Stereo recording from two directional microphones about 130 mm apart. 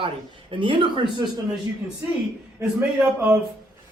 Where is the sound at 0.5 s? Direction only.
40° right (ahead or behind).